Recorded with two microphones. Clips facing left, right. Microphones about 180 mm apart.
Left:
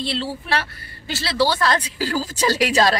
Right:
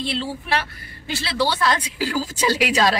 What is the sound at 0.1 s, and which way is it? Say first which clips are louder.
A woman's voice: even; 35° left (ahead or behind).